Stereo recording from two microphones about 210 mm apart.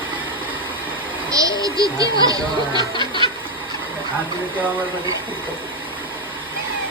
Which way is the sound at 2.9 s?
25° left (ahead or behind).